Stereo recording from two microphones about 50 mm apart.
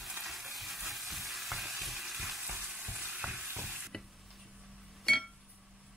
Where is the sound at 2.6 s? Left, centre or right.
Centre.